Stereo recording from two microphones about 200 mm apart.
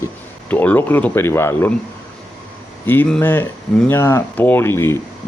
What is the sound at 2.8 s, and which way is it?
Speech, 10° left (ahead or behind).